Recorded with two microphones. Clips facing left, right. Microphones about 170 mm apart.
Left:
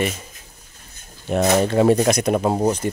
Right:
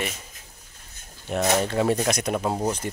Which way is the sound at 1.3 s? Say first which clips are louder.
Left 6 dB; 35° left (ahead or behind).